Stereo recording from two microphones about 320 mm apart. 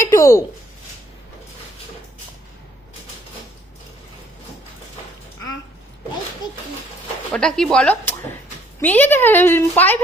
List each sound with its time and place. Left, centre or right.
0.1 s speech: centre
7.3 s a woman's voice: centre